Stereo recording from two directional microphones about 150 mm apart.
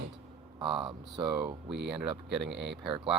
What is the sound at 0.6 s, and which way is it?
Speech, 35° right (ahead or behind).